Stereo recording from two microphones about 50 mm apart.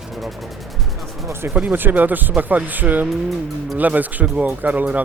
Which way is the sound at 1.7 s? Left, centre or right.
Right.